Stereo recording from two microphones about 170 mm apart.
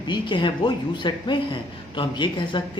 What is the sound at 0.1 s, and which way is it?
A man's voice, 30° left (ahead or behind).